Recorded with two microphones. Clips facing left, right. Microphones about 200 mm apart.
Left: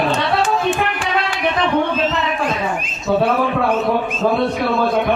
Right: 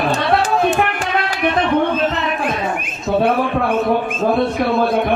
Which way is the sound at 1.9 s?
55° right (ahead or behind).